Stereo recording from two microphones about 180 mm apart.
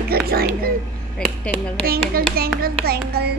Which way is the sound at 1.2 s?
5° left (ahead or behind).